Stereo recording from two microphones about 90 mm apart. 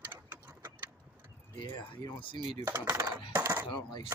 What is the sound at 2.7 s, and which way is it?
Dishes, 40° right (ahead or behind).